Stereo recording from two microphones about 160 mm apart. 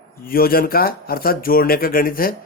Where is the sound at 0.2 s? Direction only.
65° left (ahead or behind).